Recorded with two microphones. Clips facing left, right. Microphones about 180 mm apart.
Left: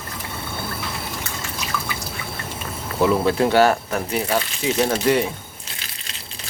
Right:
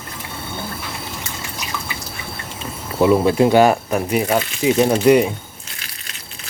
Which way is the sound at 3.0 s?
15° right (ahead or behind).